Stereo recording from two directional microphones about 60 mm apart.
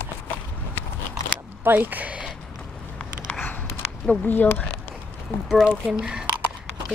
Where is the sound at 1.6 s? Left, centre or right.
Right.